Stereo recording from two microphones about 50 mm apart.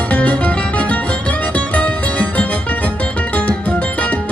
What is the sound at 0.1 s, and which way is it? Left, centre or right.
Music, left.